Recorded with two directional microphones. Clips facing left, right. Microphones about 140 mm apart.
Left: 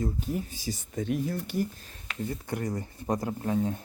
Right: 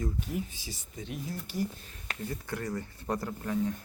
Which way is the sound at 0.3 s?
40° left (ahead or behind).